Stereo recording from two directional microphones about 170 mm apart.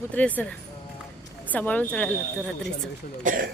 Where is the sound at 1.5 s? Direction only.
10° left (ahead or behind).